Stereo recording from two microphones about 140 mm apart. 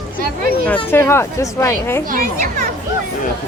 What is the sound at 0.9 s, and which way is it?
Speech, 20° left (ahead or behind).